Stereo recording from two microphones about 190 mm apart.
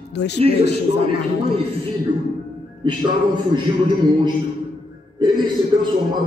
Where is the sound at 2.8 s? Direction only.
25° right (ahead or behind).